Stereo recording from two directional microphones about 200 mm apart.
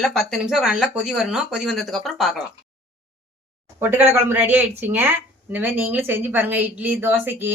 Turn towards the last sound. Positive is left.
turn(degrees=-10)  # may be behind; listen again after turning